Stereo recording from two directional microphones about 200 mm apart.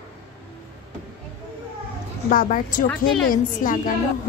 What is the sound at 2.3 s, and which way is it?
Speech, 45° left (ahead or behind).